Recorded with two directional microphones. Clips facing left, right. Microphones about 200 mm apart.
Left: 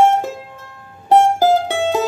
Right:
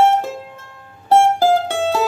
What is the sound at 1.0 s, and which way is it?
Mandolin, 15° left (ahead or behind).